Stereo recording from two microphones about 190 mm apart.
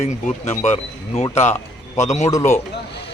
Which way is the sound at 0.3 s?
40° left (ahead or behind).